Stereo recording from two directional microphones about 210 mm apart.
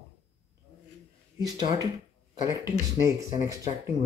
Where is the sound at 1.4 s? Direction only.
15° right (ahead or behind).